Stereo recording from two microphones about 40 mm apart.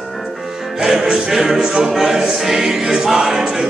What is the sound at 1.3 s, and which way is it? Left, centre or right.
Choir, centre.